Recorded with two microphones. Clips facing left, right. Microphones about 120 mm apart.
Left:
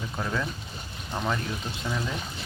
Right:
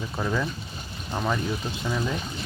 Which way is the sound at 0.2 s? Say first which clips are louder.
Right 3 dB; 5° right (ahead or behind).